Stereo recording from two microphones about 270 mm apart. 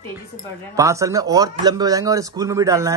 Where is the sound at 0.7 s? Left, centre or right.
Centre.